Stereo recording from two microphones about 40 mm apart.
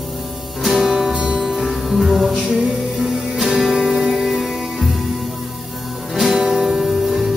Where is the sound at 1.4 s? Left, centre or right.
Centre.